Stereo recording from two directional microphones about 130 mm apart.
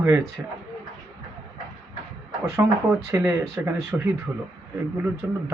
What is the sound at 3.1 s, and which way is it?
Speech, 25° right (ahead or behind).